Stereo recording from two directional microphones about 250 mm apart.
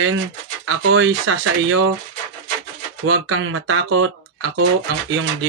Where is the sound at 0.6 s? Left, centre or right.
Right.